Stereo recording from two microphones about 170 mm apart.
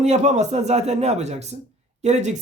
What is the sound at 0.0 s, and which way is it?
Speech, 45° right (ahead or behind).